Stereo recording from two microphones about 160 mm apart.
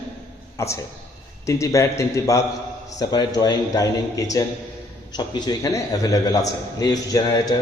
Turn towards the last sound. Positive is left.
turn(degrees=25)  # may be behind; listen again after turning